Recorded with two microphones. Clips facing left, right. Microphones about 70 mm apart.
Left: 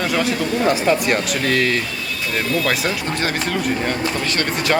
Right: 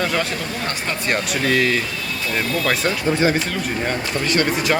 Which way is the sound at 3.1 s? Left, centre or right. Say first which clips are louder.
Right 5 dB; centre.